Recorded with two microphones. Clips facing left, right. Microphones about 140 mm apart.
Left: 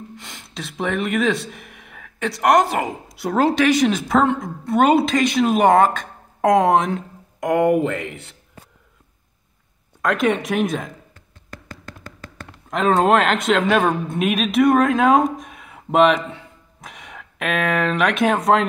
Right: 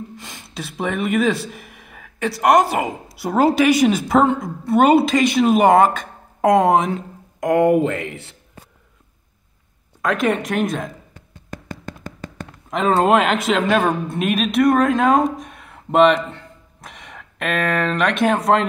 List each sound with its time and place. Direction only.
0.2 s a woman's voice: 5° right (ahead or behind)
10.0 s a woman's voice: centre (ahead or behind)
12.6 s a woman's voice: centre (ahead or behind)
16.3 s a sound: centre (ahead or behind)